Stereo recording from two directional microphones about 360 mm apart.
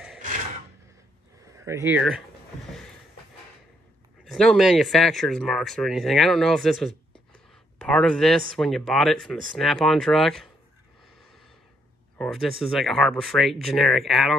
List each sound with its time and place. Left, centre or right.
1.4 s speech: centre
4.2 s speech: centre
12.2 s speech: centre